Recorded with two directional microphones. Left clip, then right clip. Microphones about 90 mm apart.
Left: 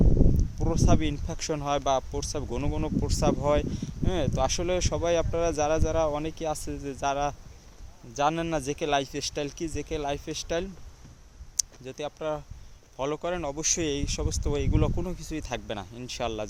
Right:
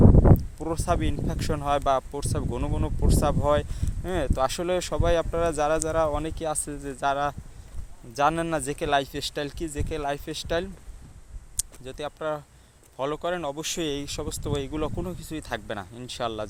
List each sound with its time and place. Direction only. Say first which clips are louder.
0.6 s speech: even; 20° left (ahead or behind)
8.1 s speech: right 3 dB; centre (ahead or behind); by 10.7 s 15° left (ahead or behind)
11.5 s a sound: left 3 dB; 30° left (ahead or behind)
12.0 s speech: right 2 dB; 15° left (ahead or behind)